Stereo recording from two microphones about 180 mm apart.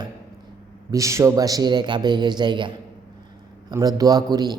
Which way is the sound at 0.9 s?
15° right (ahead or behind).